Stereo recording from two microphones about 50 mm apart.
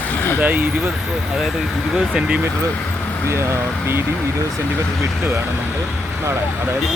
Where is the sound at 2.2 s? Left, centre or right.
Right.